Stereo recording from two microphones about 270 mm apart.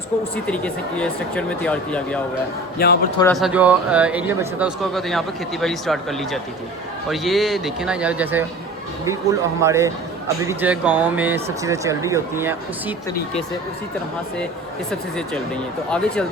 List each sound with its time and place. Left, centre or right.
0.4 s speech: centre
2.7 s speech: left
3.3 s speech: centre
15.9 s speech: centre